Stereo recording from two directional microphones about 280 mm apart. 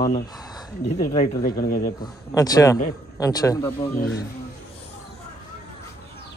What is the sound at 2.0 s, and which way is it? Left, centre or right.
Speech, centre.